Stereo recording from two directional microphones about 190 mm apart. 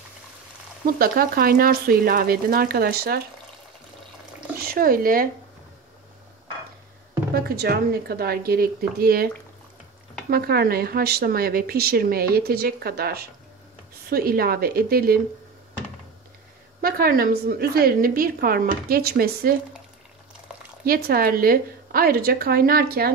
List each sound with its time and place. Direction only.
0.8 s a woman's voice: 50° right (ahead or behind)
4.6 s speech: 50° right (ahead or behind)
7.3 s a woman's voice: 55° right (ahead or behind)
10.3 s a woman's voice: 55° right (ahead or behind)
16.8 s a woman's voice: 50° right (ahead or behind)
20.8 s a woman's voice: 50° right (ahead or behind)